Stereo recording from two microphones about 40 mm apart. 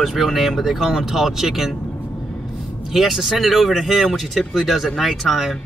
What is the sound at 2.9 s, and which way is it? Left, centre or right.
Speech, centre.